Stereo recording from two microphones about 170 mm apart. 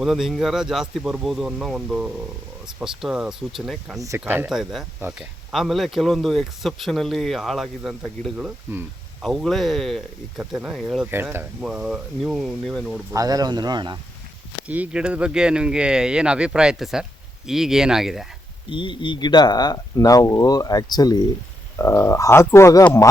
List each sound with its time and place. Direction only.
0.0 s speech: centre (ahead or behind)
5.5 s speech: centre (ahead or behind)
11.1 s speech: 15° right (ahead or behind)
11.7 s speech: 5° right (ahead or behind)
13.1 s speech: 20° right (ahead or behind)
14.7 s speech: 5° right (ahead or behind)
18.7 s speech: 30° left (ahead or behind)